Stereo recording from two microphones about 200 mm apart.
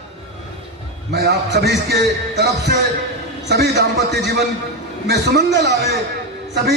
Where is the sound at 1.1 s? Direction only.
55° right (ahead or behind).